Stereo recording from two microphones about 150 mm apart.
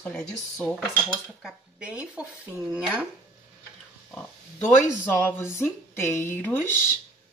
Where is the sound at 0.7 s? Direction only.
5° right (ahead or behind).